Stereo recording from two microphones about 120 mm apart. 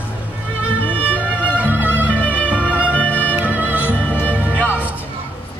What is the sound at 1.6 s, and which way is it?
Music, 15° right (ahead or behind).